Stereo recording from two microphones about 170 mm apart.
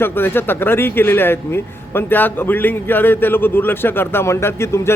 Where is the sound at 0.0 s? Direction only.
10° left (ahead or behind).